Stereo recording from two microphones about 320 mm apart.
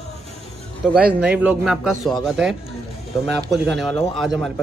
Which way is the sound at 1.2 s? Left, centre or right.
Centre.